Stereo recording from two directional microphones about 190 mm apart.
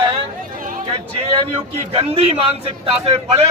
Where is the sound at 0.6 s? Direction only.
45° right (ahead or behind).